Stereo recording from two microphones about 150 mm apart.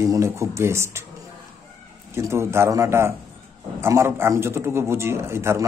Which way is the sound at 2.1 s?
15° right (ahead or behind).